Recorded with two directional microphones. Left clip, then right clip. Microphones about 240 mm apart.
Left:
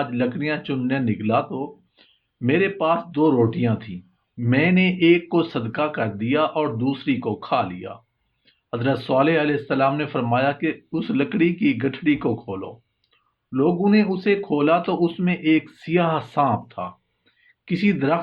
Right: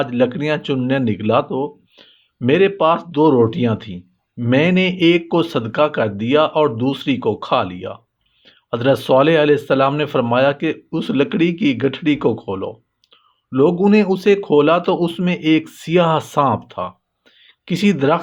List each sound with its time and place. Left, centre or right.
0.0 s speech: right